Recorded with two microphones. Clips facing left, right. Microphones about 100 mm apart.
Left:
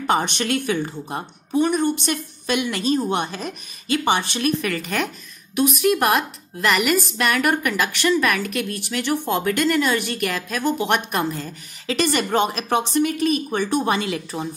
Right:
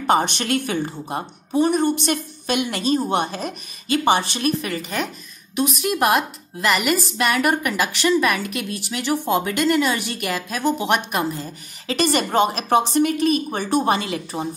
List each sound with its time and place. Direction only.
0.2 s a woman's voice: 45° right (ahead or behind)
4.6 s speech: 20° right (ahead or behind)
4.8 s a woman's voice: centre (ahead or behind)
11.9 s speech: 40° right (ahead or behind)